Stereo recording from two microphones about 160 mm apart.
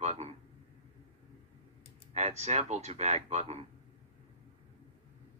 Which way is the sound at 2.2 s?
45° right (ahead or behind).